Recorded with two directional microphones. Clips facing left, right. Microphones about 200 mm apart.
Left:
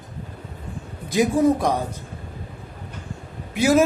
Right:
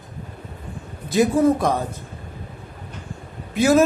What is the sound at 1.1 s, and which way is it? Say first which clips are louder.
Speech: right 1 dB; 10° left (ahead or behind).